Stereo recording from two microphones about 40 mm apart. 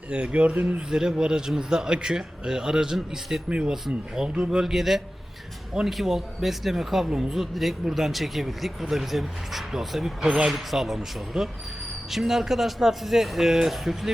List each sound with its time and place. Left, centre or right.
0.1 s speech: right
0.9 s speech: centre
4.6 s speech: centre
10.5 s speech: centre